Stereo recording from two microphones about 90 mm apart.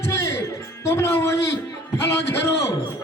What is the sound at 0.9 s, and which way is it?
Music, 30° left (ahead or behind).